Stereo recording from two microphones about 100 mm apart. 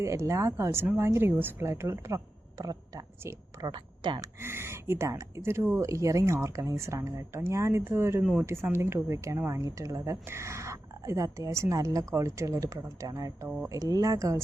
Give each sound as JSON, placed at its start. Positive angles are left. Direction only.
{"t": 0.0, "sound": "a woman's voice", "side_deg": -30}
{"t": 3.7, "sound": "speech", "side_deg": -50}
{"t": 4.4, "sound": "a woman's voice", "side_deg": -25}